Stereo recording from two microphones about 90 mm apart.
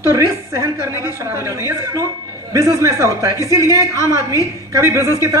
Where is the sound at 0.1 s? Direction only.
35° right (ahead or behind).